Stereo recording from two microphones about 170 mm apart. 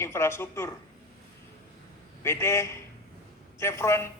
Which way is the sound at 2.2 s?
15° left (ahead or behind).